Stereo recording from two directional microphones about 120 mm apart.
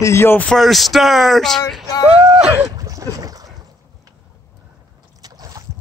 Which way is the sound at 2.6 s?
30° right (ahead or behind).